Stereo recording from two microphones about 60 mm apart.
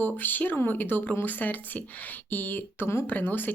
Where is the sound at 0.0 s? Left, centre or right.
Left.